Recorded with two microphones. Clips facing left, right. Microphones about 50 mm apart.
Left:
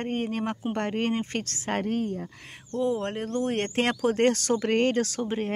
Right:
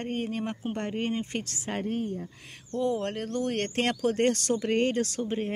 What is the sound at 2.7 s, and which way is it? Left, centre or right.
Speech, centre.